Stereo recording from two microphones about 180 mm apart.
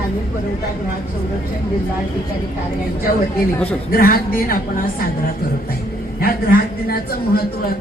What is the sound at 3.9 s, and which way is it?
Speech, 55° left (ahead or behind).